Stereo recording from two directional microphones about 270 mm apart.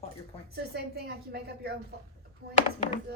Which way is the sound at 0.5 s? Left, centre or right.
Right.